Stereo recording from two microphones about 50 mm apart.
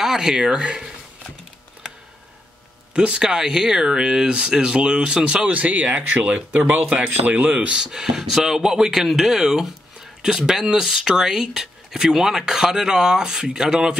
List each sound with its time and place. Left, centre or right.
0.0 s speech: centre
2.9 s speech: right